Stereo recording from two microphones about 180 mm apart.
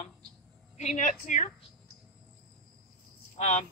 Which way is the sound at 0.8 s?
40° left (ahead or behind).